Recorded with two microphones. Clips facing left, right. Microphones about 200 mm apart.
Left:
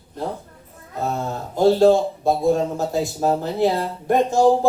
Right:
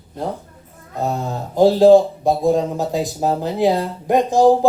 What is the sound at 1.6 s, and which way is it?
Speech, 15° right (ahead or behind).